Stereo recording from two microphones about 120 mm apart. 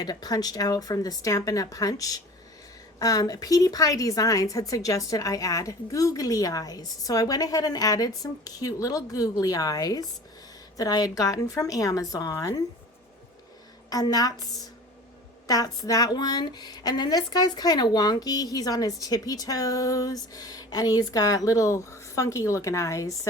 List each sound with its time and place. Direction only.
0.0 s a woman's voice: 35° left (ahead or behind)
13.9 s a woman's voice: 30° left (ahead or behind)
15.4 s a woman's voice: 30° left (ahead or behind)